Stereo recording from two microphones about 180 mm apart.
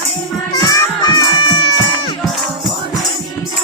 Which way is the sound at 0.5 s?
20° left (ahead or behind).